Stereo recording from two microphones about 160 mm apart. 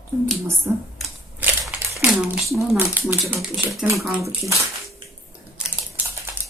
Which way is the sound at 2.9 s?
15° right (ahead or behind).